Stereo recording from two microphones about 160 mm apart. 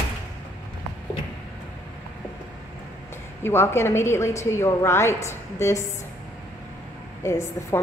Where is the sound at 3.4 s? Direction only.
15° left (ahead or behind).